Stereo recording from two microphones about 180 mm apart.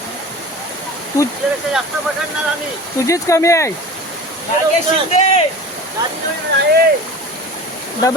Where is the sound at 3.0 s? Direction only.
15° left (ahead or behind).